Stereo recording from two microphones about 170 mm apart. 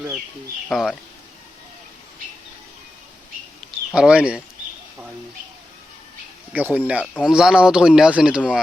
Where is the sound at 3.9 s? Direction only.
5° right (ahead or behind).